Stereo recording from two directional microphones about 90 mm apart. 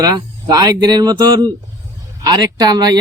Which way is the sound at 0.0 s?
50° right (ahead or behind).